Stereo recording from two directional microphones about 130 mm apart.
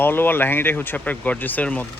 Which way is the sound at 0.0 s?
15° left (ahead or behind).